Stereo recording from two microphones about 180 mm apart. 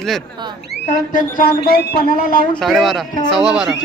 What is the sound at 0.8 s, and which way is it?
Speech, 50° left (ahead or behind).